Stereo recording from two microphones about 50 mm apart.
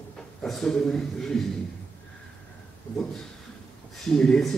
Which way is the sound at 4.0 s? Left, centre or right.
Centre.